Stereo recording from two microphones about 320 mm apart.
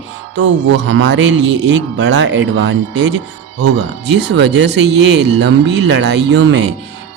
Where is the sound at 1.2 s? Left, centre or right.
Right.